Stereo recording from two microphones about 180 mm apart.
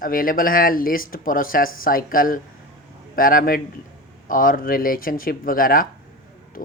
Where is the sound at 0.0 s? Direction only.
50° left (ahead or behind).